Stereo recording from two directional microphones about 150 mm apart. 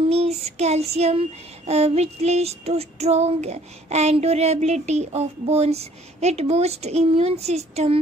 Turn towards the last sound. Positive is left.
turn(degrees=-45)  # may be behind; listen again after turning